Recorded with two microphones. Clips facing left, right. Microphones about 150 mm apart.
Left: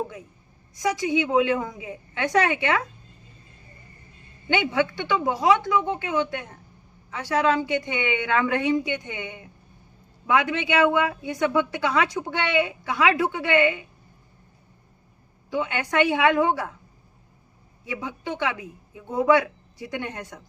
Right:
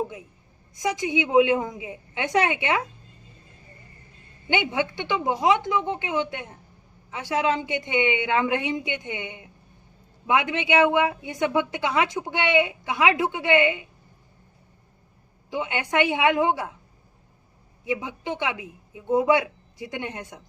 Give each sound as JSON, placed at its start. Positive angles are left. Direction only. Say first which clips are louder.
{"t": 0.8, "sound": "speech", "louder": "left 2 dB", "side_deg": -20}
{"t": 4.4, "sound": "speech", "louder": "left 2 dB", "side_deg": -20}
{"t": 15.4, "sound": "a woman's voice", "louder": "left 1 dB", "side_deg": -15}
{"t": 17.8, "sound": "speech", "louder": "right 3 dB", "side_deg": -20}